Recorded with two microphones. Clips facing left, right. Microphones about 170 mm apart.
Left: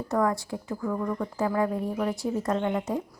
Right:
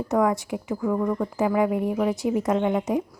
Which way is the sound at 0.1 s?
20° right (ahead or behind).